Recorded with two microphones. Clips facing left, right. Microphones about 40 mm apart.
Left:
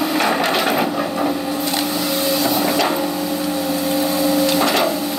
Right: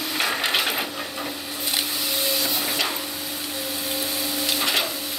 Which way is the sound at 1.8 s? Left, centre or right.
Centre.